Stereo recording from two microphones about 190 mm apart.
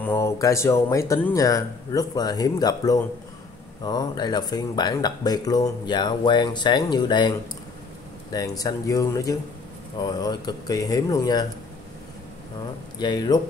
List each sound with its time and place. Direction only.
0.0 s speech: 15° left (ahead or behind)
13.0 s speech: 20° left (ahead or behind)